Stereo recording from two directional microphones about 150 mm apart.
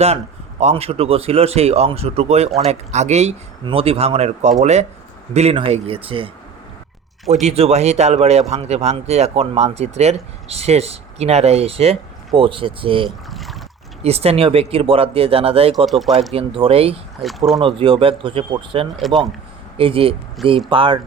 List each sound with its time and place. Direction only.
0.6 s a man's voice: 45° right (ahead or behind)
3.6 s a man's voice: 35° right (ahead or behind)
7.4 s a man's voice: 45° right (ahead or behind)
13.1 s boat: centre (ahead or behind)
14.0 s speech: 45° right (ahead or behind)
15.9 s speech: centre (ahead or behind)
16.3 s speech: 40° right (ahead or behind)
17.2 s speech: centre (ahead or behind)
17.6 s speech: 35° right (ahead or behind)
18.9 s speech: centre (ahead or behind)
19.7 s speech: 40° right (ahead or behind)